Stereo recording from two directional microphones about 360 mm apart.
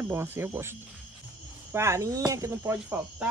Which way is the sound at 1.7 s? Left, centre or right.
Centre.